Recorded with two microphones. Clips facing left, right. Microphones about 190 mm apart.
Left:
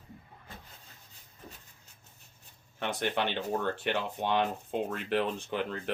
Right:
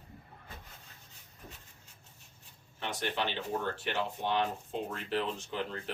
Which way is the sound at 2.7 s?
60° left (ahead or behind).